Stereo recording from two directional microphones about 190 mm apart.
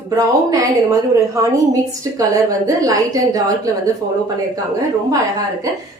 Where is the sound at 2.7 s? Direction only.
20° right (ahead or behind).